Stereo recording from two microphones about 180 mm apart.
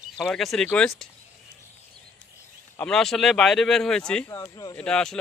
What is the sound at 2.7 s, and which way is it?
A man's voice, 5° left (ahead or behind).